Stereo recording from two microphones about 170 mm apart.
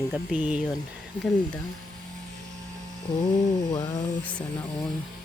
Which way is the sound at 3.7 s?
20° left (ahead or behind).